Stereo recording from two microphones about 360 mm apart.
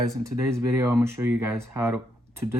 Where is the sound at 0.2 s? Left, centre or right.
Centre.